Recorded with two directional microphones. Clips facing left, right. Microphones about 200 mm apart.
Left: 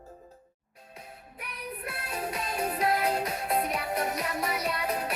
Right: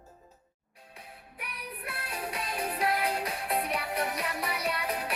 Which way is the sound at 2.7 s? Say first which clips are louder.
Left 2 dB; 40° left (ahead or behind).